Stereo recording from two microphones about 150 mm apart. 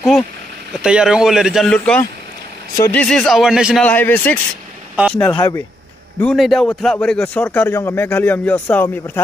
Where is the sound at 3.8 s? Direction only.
10° left (ahead or behind).